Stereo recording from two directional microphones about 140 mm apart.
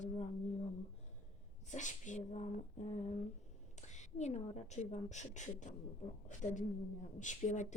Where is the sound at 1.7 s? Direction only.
60° left (ahead or behind).